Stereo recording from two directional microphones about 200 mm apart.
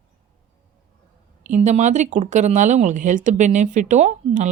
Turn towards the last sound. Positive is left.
turn(degrees=-35)  # may be behind; listen again after turning